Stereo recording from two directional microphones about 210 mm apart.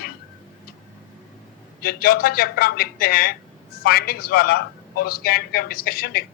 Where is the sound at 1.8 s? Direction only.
45° left (ahead or behind).